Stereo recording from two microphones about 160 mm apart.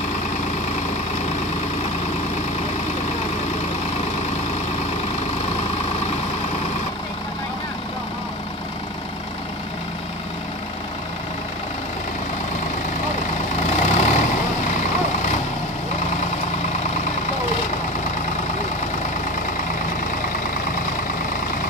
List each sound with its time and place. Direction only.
13.7 s vehicle: 45° left (ahead or behind)